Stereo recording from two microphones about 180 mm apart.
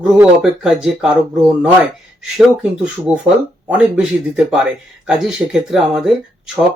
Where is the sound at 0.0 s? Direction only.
5° right (ahead or behind).